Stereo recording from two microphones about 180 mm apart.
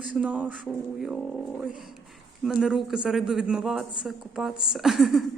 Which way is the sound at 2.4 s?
5° right (ahead or behind).